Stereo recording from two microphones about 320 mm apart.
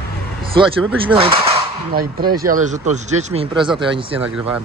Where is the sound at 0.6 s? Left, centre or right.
Centre.